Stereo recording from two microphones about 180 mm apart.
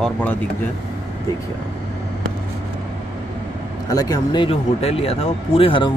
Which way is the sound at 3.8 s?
20° left (ahead or behind).